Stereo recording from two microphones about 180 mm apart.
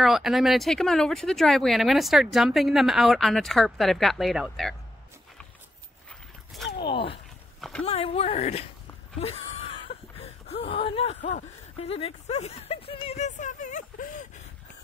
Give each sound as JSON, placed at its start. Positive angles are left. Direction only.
{"t": 0.0, "sound": "speech", "side_deg": 0}
{"t": 6.0, "sound": "dog", "side_deg": 0}
{"t": 6.8, "sound": "speech", "side_deg": 30}
{"t": 9.2, "sound": "wail", "side_deg": 35}
{"t": 10.1, "sound": "a sound", "side_deg": 30}
{"t": 11.2, "sound": "speech", "side_deg": 40}
{"t": 13.4, "sound": "speech", "side_deg": 45}